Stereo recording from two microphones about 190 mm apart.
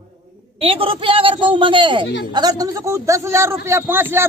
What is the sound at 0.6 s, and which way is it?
A man's voice, 30° right (ahead or behind).